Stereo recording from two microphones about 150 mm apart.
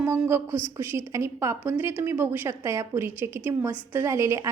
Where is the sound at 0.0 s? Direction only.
15° right (ahead or behind).